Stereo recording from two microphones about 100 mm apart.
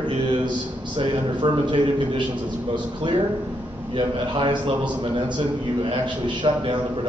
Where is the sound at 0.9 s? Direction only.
50° right (ahead or behind).